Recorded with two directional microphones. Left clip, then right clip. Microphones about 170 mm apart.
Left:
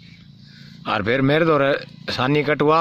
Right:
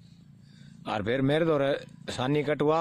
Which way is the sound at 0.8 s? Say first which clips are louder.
Left 9 dB; 10° right (ahead or behind).